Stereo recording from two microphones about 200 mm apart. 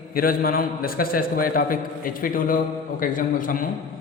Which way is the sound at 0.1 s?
45° left (ahead or behind).